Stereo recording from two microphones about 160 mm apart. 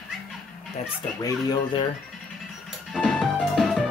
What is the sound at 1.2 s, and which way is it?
Speech, 25° left (ahead or behind).